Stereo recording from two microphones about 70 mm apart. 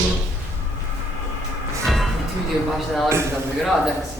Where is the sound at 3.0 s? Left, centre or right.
Right.